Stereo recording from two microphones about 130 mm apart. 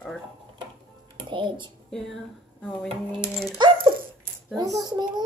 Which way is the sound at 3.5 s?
35° right (ahead or behind).